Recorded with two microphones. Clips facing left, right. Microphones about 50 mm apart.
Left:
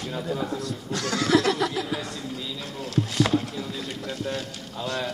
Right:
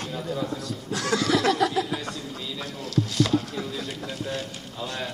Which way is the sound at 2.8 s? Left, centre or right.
Left.